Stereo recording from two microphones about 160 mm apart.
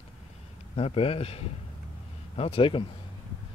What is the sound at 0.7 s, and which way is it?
Speech, 35° left (ahead or behind).